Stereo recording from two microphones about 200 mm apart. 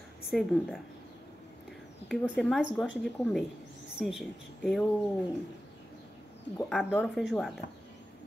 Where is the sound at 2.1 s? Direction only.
Centre (ahead or behind).